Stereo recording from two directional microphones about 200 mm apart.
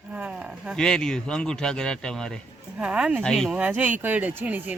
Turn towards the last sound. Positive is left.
turn(degrees=-10)  # may be behind; listen again after turning